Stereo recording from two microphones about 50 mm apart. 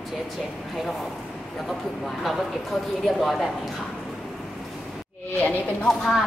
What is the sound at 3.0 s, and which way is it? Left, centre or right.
Speech, centre.